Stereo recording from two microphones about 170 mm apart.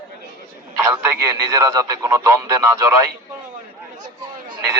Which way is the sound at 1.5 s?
20° right (ahead or behind).